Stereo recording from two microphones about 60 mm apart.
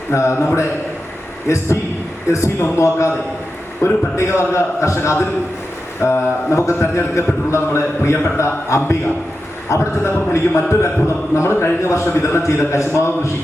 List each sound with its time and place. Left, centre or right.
0.1 s a man's voice: left
1.5 s a man's voice: left